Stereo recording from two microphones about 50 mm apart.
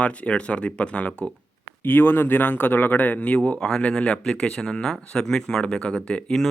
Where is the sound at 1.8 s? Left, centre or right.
Left.